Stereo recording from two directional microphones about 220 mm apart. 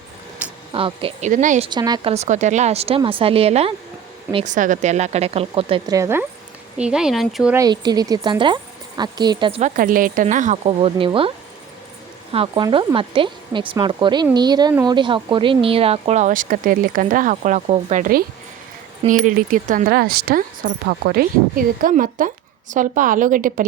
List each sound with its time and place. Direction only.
0.7 s speech: 25° right (ahead or behind)
1.3 s speech: 35° right (ahead or behind); by 2.1 s 20° right (ahead or behind)
2.1 s speech: 30° right (ahead or behind); by 7.5 s centre (ahead or behind)
7.5 s speech: 15° right (ahead or behind)
12.3 s speech: 25° right (ahead or behind)